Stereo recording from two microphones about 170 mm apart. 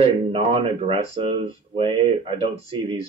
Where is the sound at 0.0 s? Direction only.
35° right (ahead or behind).